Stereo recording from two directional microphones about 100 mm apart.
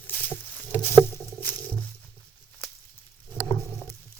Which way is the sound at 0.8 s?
20° left (ahead or behind).